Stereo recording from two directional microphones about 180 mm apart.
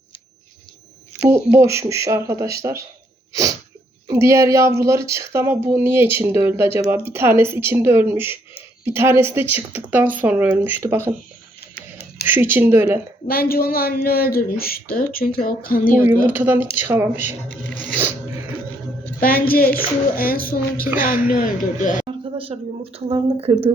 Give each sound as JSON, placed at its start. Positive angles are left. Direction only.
{"t": 1.2, "sound": "speech", "side_deg": -15}
{"t": 4.1, "sound": "speech", "side_deg": -15}
{"t": 12.2, "sound": "speech", "side_deg": -10}
{"t": 13.2, "sound": "speech", "side_deg": 55}
{"t": 16.2, "sound": "speech", "side_deg": -10}
{"t": 19.5, "sound": "speech", "side_deg": 55}
{"t": 22.0, "sound": "speech", "side_deg": -30}